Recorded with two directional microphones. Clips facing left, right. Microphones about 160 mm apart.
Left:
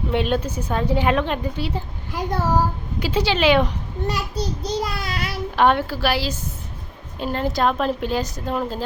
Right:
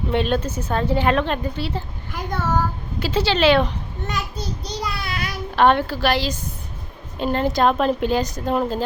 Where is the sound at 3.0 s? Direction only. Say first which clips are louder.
Right 1 dB; 15° left (ahead or behind).